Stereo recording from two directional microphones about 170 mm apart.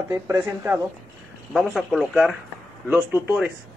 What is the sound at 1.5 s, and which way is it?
Speech, centre (ahead or behind).